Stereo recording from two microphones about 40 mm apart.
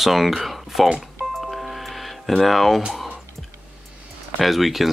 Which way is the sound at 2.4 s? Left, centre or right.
Centre.